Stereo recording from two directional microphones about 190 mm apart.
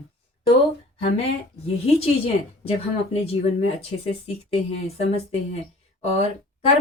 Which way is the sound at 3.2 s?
30° left (ahead or behind).